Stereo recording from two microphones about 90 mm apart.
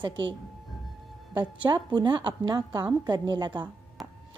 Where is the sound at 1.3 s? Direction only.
60° right (ahead or behind).